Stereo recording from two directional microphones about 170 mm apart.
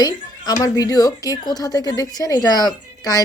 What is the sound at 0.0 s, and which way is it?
A woman's voice, 20° left (ahead or behind).